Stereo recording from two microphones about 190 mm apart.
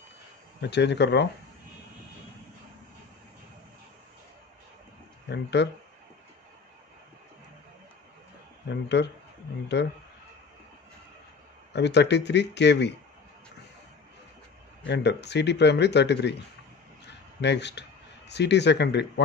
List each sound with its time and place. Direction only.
0.6 s speech: 65° left (ahead or behind)
5.3 s speech: 65° left (ahead or behind)
8.6 s speech: 65° left (ahead or behind)
11.7 s speech: 65° left (ahead or behind)
14.9 s speech: 65° left (ahead or behind)
17.0 s a sound: 65° left (ahead or behind)
18.3 s speech: 65° left (ahead or behind)